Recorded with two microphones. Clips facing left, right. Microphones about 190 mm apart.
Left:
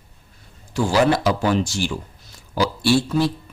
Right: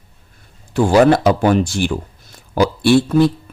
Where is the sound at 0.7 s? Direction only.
55° right (ahead or behind).